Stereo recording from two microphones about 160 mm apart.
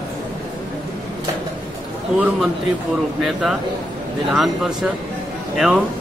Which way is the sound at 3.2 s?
Centre (ahead or behind).